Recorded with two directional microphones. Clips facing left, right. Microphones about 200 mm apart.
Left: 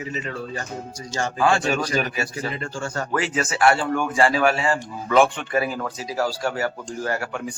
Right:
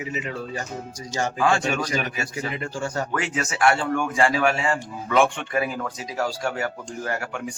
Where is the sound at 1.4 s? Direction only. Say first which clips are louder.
Left 2 dB; 35° left (ahead or behind).